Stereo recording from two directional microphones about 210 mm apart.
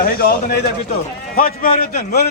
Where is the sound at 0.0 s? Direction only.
45° left (ahead or behind).